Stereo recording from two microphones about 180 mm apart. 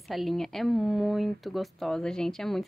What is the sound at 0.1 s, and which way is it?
Speech, centre (ahead or behind).